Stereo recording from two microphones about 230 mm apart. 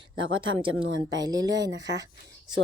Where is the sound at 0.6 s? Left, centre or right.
Centre.